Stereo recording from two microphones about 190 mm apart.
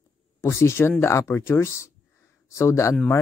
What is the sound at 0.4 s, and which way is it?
Speech, 15° left (ahead or behind).